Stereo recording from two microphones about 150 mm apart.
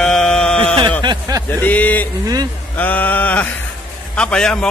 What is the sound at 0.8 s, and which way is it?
Speech, 30° right (ahead or behind).